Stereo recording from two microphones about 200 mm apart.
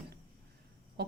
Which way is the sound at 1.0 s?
55° right (ahead or behind).